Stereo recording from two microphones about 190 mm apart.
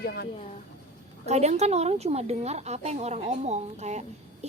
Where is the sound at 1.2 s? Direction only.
35° right (ahead or behind).